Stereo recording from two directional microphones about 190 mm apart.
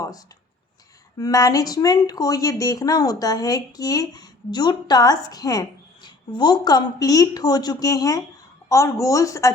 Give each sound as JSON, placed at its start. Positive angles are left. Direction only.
{"t": 0.0, "sound": "a woman's voice", "side_deg": 20}